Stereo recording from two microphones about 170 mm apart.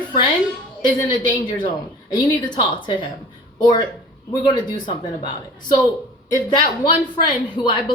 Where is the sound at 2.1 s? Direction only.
25° left (ahead or behind).